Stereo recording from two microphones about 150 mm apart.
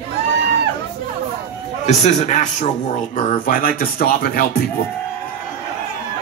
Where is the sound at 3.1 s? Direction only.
65° left (ahead or behind); by 4.6 s 85° left.